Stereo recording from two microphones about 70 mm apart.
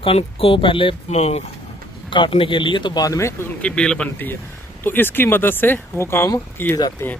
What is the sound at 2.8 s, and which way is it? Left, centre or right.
Speech, left.